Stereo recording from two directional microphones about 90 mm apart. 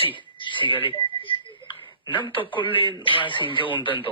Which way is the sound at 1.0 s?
75° left (ahead or behind).